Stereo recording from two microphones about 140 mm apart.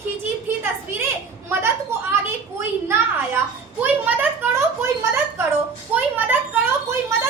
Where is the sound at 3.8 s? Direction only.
10° right (ahead or behind).